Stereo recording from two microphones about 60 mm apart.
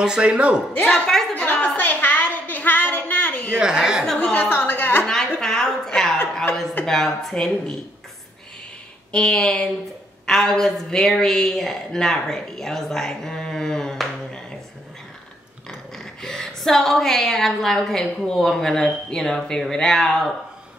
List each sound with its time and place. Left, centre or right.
0.0 s a man's voice: centre
0.8 s a woman's voice: centre
1.4 s a sound: left
3.5 s a man's voice: centre
4.2 s a woman's voice: left
4.5 s a woman's voice: left
5.0 s a woman's voice: centre
9.1 s a woman's voice: centre
16.0 s a woman's voice: centre